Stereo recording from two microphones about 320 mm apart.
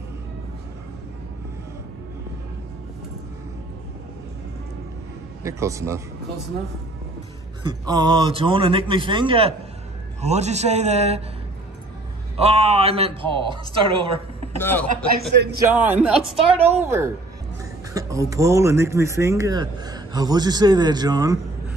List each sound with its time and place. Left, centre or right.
5.4 s speech: centre
7.6 s a man's voice: centre
12.4 s speech: centre
14.6 s speech: centre
15.1 s a man's voice: right
15.5 s speech: centre